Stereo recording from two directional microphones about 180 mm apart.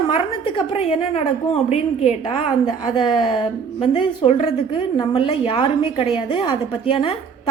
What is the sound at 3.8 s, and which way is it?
A woman's voice, 35° left (ahead or behind).